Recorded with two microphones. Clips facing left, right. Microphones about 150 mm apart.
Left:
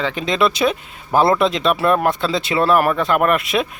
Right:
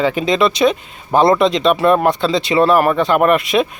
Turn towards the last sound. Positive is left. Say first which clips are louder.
# right 4 dB
turn(degrees=0)  # may be behind; listen again after turning